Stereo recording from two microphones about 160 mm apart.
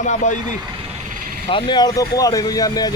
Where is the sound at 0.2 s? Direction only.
50° left (ahead or behind).